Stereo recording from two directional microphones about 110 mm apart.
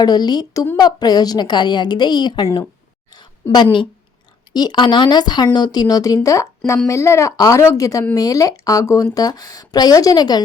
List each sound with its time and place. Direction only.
0.0 s a woman's voice: 35° left (ahead or behind)
3.5 s a woman's voice: 45° left (ahead or behind)